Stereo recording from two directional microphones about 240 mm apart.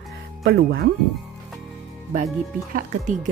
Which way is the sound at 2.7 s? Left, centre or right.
Right.